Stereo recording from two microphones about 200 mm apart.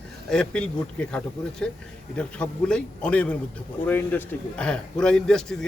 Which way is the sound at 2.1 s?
5° left (ahead or behind).